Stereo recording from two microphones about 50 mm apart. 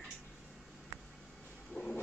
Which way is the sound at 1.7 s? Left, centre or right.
Left.